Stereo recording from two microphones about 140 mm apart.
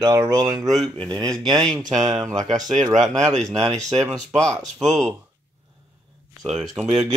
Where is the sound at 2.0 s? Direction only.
25° right (ahead or behind).